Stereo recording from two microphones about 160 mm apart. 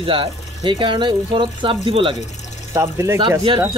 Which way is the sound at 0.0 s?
35° right (ahead or behind).